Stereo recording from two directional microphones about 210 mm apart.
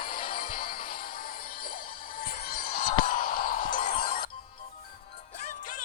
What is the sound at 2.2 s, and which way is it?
Music, 45° left (ahead or behind).